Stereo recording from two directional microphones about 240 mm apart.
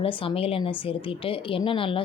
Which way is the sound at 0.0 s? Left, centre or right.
Left.